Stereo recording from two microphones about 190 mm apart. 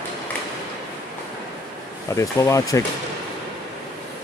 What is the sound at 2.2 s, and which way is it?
Speech, 15° left (ahead or behind).